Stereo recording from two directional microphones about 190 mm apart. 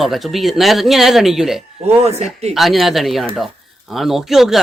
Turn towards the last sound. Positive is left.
turn(degrees=0)  # may be behind; listen again after turning